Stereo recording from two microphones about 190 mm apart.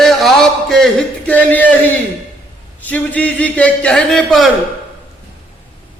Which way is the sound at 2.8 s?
10° left (ahead or behind).